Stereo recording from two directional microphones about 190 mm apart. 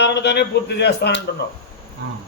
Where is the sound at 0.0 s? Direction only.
65° left (ahead or behind).